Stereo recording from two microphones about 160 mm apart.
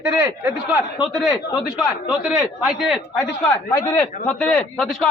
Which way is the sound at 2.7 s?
5° right (ahead or behind).